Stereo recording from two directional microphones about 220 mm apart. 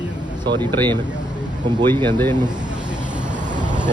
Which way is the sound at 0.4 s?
20° right (ahead or behind).